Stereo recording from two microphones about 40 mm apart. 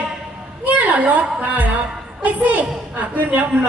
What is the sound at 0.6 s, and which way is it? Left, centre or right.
A woman's voice, right.